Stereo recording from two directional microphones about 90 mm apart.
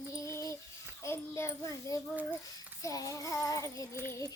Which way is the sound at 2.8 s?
40° left (ahead or behind).